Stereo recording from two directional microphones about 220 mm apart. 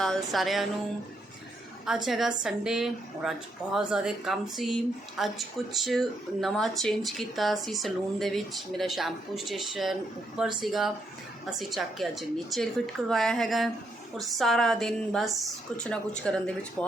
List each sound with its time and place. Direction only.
0.0 s speech: centre (ahead or behind)
2.0 s speech: centre (ahead or behind)